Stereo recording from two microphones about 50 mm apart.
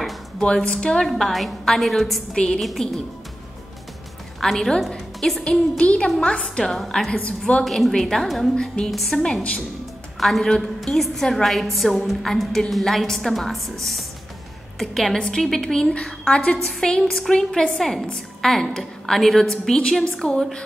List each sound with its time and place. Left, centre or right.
0.4 s a woman's voice: centre
2.3 s a woman's voice: centre
2.6 s a woman's voice: centre
4.4 s a woman's voice: centre
5.8 s a woman's voice: centre
7.1 s a woman's voice: left
7.6 s a woman's voice: centre
8.9 s a woman's voice: centre
10.2 s a woman's voice: centre
14.8 s a woman's voice: centre
15.1 s a woman's voice: centre